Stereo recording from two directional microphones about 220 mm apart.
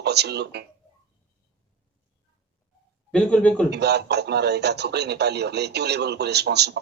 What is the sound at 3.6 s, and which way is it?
A man's voice, 50° right (ahead or behind).